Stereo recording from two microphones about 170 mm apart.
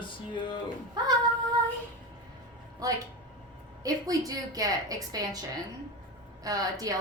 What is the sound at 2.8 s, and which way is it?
A woman's voice, 20° right (ahead or behind).